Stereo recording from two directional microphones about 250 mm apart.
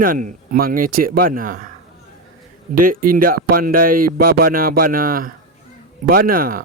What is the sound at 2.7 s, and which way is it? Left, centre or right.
Speech, right.